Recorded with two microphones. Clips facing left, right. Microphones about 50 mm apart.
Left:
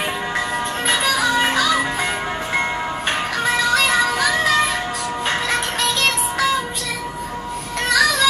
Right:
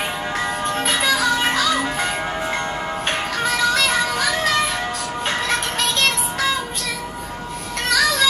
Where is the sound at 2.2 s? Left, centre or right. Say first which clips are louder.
Left 1 dB; centre.